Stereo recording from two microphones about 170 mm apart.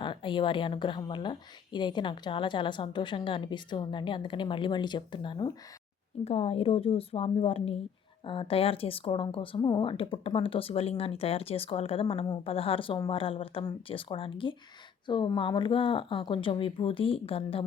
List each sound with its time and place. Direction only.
0.0 s a woman's voice: 30° left (ahead or behind)
6.2 s speech: 35° left (ahead or behind)